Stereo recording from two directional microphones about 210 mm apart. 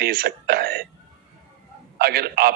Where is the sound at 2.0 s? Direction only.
45° right (ahead or behind).